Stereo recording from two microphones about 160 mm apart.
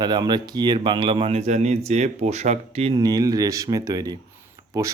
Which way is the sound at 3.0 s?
25° right (ahead or behind).